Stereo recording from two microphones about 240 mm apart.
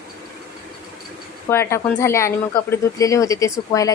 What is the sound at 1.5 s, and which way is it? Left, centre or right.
Speech, centre.